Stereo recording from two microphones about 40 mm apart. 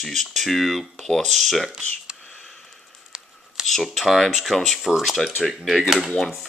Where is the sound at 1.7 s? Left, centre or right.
Right.